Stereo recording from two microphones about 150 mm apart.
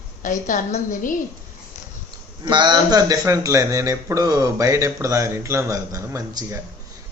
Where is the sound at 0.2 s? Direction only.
60° left (ahead or behind).